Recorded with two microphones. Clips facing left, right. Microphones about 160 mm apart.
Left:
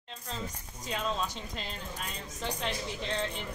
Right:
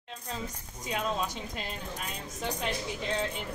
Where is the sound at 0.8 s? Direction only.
10° right (ahead or behind).